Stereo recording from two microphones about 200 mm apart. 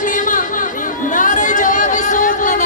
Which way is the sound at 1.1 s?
40° left (ahead or behind).